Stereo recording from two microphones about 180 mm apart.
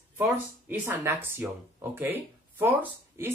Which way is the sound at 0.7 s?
15° right (ahead or behind).